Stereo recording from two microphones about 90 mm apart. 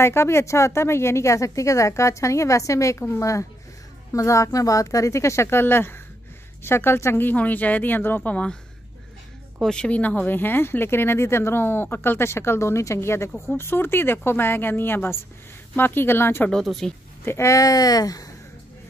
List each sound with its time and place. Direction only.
0.0 s speech: 30° left (ahead or behind)
9.6 s speech: 10° left (ahead or behind); by 16.4 s 25° left (ahead or behind)
16.6 s speech: 5° left (ahead or behind)
17.2 s speech: 30° left (ahead or behind)